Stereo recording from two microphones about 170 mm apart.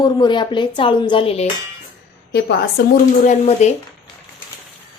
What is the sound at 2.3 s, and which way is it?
Speech, 75° left (ahead or behind).